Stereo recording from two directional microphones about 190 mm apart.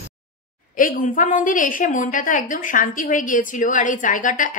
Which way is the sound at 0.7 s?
45° left (ahead or behind).